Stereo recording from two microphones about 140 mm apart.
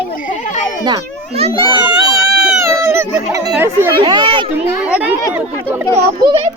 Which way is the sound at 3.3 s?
25° right (ahead or behind).